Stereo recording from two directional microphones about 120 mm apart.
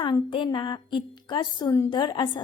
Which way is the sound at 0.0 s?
45° left (ahead or behind).